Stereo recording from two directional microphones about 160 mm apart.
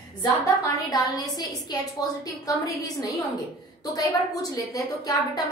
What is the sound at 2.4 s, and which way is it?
A woman's voice, 20° left (ahead or behind).